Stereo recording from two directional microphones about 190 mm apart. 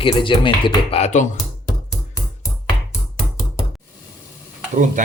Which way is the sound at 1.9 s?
15° left (ahead or behind).